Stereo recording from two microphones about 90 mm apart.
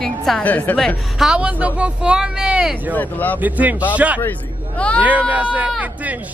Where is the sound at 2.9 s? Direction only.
20° left (ahead or behind).